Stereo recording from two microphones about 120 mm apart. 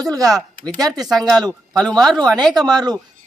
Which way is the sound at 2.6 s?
35° right (ahead or behind).